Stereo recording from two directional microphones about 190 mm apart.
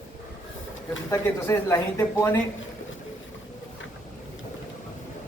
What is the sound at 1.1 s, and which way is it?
Speech, 15° left (ahead or behind).